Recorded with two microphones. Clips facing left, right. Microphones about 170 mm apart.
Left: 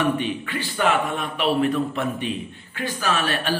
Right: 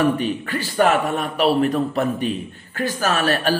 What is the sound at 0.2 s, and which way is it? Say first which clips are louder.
A man's voice: right 3 dB; 40° right (ahead or behind).